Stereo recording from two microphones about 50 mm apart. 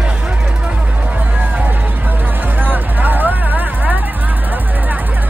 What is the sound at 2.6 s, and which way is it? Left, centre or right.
Vehicle, right.